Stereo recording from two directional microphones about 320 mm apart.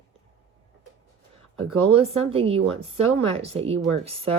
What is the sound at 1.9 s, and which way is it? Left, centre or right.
Speech, centre.